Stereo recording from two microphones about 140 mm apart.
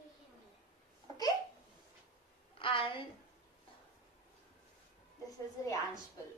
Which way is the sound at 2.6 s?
40° left (ahead or behind).